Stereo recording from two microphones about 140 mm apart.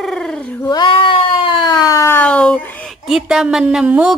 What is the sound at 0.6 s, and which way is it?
Speech, 30° left (ahead or behind).